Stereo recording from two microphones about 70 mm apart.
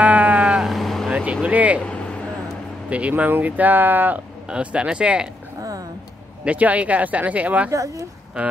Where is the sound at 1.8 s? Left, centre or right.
Centre.